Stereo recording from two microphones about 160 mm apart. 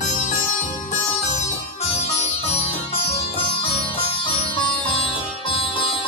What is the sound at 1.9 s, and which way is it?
Music, 40° left (ahead or behind).